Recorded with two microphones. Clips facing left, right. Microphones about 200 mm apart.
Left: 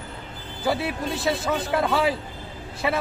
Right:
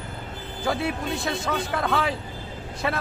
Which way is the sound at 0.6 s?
5° left (ahead or behind).